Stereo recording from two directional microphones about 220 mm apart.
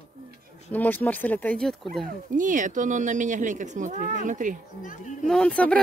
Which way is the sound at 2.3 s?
35° right (ahead or behind).